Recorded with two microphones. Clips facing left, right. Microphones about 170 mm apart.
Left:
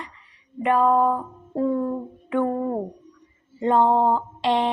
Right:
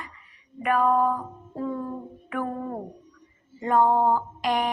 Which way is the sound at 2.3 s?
25° left (ahead or behind).